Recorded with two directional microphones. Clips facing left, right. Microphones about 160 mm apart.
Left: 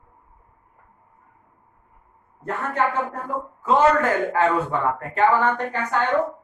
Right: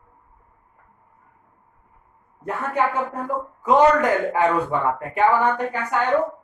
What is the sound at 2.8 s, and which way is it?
A man's voice, 10° right (ahead or behind).